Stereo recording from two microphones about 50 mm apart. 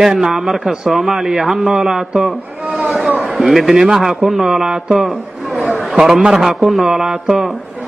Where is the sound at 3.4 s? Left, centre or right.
Centre.